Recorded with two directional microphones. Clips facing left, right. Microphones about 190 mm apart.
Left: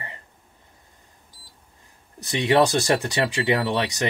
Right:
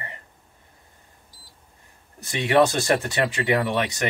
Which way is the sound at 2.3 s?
20° left (ahead or behind).